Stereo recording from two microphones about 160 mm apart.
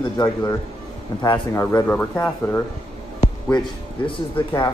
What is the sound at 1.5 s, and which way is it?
Speech, 20° left (ahead or behind).